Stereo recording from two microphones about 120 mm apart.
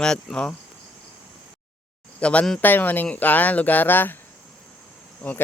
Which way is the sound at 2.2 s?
10° left (ahead or behind).